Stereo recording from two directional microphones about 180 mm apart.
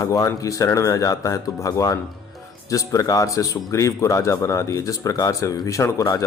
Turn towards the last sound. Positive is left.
turn(degrees=15)  # may be behind; listen again after turning